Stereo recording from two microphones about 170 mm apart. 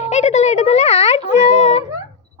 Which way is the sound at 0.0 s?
40° left (ahead or behind).